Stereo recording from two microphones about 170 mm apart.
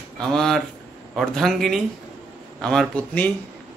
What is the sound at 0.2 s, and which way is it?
A man's voice, 5° left (ahead or behind).